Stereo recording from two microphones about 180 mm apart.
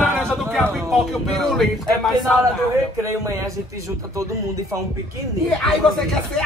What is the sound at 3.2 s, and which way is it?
Speech, 15° right (ahead or behind).